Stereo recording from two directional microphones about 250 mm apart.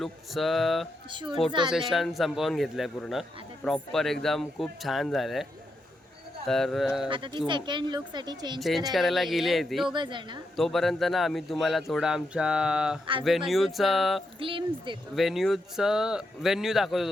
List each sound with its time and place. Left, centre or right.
0.0 s a man's voice: centre
1.1 s speech: centre
1.7 s a man's voice: centre
6.5 s a man's voice: centre
7.1 s speech: centre
8.5 s a man's voice: centre
9.9 s speech: centre
10.6 s a man's voice: centre
14.3 s speech: right
15.1 s a man's voice: centre